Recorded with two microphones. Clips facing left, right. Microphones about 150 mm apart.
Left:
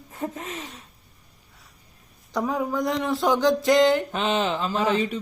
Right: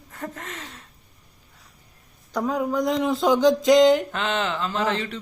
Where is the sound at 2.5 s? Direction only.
20° right (ahead or behind).